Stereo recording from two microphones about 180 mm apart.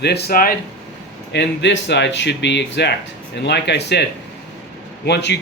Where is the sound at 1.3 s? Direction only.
75° left (ahead or behind).